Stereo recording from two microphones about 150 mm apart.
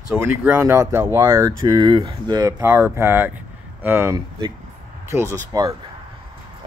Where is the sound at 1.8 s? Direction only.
30° right (ahead or behind); by 4.1 s 15° right (ahead or behind).